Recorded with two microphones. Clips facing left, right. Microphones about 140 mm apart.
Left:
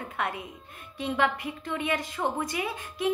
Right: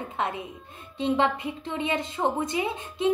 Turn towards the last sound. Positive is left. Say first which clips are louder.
# right 4 dB
turn(degrees=-25)  # may be behind; listen again after turning